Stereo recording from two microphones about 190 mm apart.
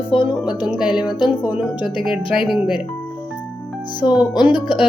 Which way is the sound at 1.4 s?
5° right (ahead or behind).